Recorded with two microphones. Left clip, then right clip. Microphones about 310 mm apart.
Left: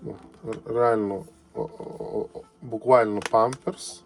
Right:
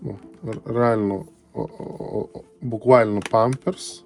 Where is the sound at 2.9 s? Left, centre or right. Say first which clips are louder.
Right 3 dB; right.